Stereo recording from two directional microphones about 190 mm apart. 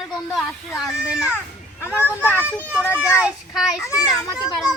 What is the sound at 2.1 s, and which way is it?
Speech, 10° left (ahead or behind).